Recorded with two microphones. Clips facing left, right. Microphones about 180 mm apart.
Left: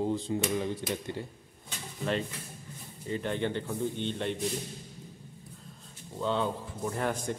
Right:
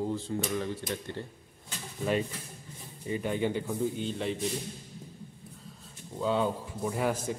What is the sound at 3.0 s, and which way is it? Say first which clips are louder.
A man's voice: right 1 dB; 10° right (ahead or behind).